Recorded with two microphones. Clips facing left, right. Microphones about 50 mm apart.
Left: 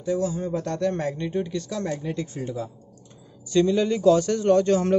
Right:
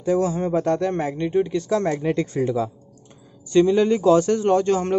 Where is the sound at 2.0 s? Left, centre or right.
Right.